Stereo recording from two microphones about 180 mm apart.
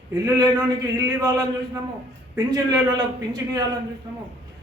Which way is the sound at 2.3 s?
20° right (ahead or behind).